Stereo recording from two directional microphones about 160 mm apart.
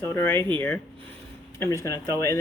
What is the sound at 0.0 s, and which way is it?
Speech, 15° left (ahead or behind).